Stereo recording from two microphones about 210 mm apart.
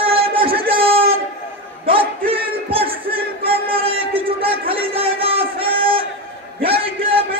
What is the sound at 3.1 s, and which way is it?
Music, 25° right (ahead or behind).